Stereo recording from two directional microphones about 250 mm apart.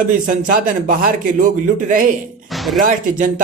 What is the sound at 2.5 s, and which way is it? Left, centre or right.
Speech, centre.